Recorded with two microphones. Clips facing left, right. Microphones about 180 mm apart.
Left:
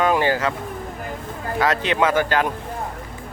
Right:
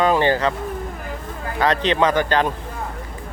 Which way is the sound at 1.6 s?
10° left (ahead or behind).